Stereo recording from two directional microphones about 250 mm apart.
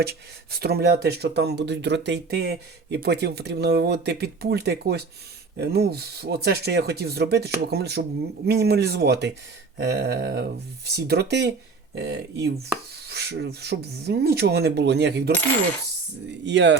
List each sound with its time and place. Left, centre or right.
0.0 s speech: right
16.5 s speech: right